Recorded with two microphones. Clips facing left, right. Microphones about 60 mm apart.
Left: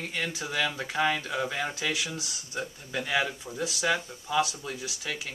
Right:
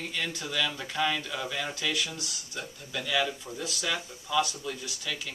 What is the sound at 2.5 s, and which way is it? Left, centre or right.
Speech, left.